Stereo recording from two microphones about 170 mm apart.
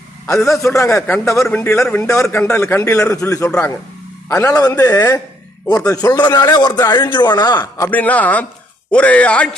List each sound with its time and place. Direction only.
0.6 s a man's voice: 15° left (ahead or behind)
4.7 s a man's voice: 10° left (ahead or behind)
7.9 s a man's voice: 10° left (ahead or behind)